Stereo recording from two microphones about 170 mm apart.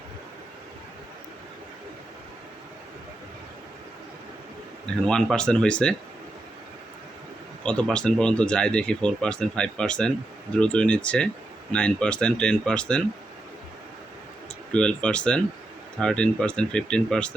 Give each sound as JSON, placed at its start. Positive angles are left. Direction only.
{"t": 5.0, "sound": "speech", "side_deg": 5}
{"t": 7.6, "sound": "speech", "side_deg": 5}
{"t": 14.7, "sound": "speech", "side_deg": 5}